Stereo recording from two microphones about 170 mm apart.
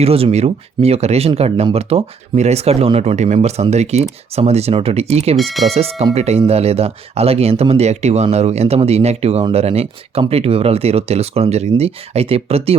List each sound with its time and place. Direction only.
0.0 s speech: 35° right (ahead or behind)
5.4 s speech: centre (ahead or behind)
5.7 s speech: 35° right (ahead or behind)